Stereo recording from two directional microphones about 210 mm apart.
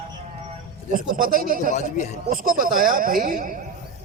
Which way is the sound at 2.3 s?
40° right (ahead or behind).